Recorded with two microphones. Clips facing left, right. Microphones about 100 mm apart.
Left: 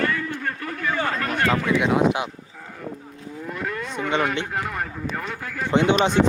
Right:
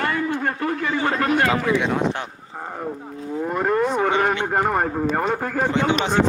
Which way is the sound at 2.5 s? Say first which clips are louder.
Right 6 dB; 45° right (ahead or behind).